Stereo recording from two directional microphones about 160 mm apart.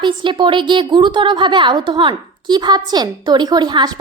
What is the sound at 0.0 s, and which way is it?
A woman's voice, 30° right (ahead or behind).